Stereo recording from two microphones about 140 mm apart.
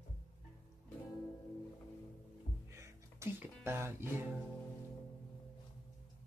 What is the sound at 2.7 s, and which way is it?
Music, 20° right (ahead or behind).